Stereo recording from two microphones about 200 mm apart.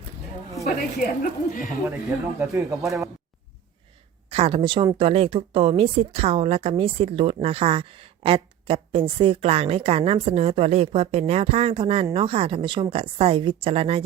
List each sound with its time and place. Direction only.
0.9 s speech: 40° left (ahead or behind)
2.0 s speech: 15° right (ahead or behind)
4.3 s a woman's voice: 30° right (ahead or behind)